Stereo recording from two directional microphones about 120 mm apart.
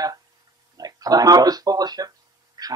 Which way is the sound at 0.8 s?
30° right (ahead or behind).